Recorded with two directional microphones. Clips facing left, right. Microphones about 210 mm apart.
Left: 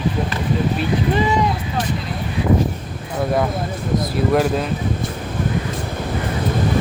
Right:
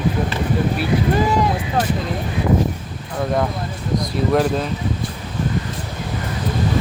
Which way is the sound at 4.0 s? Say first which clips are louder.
Even; 5° left (ahead or behind).